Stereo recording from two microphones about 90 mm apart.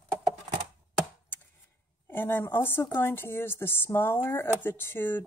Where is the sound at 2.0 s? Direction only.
25° left (ahead or behind).